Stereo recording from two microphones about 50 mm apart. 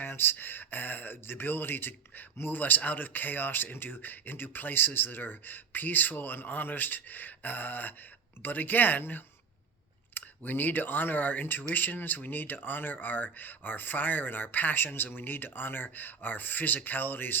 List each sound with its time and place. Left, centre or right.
0.0 s speech: left